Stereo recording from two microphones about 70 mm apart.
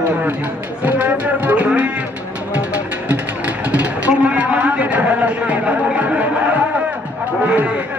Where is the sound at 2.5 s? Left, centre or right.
Centre.